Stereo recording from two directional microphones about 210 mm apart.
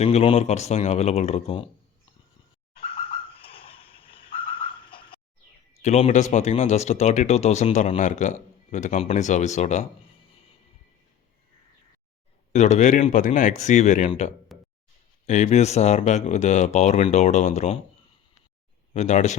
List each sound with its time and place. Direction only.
0.0 s speech: 30° left (ahead or behind)
2.8 s a sound: 25° left (ahead or behind)
5.8 s speech: 30° left (ahead or behind)
12.5 s speech: 35° left (ahead or behind)
14.5 s a sound: centre (ahead or behind)
15.3 s speech: 35° left (ahead or behind)
18.9 s speech: 35° left (ahead or behind)